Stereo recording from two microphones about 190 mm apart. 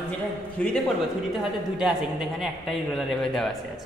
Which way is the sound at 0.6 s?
5° left (ahead or behind).